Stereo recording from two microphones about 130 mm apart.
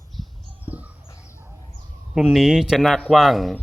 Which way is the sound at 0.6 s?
10° right (ahead or behind).